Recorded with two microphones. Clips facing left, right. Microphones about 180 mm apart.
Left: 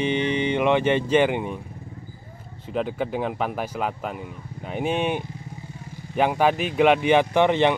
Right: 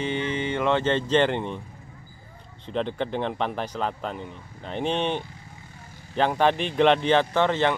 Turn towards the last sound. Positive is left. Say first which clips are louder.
# left 3 dB
turn(degrees=15)  # may be behind; listen again after turning